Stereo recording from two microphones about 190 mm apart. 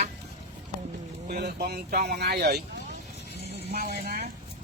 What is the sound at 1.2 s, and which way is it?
Speech, 55° right (ahead or behind).